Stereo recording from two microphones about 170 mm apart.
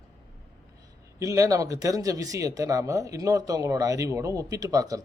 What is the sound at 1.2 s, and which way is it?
Speech, 20° right (ahead or behind).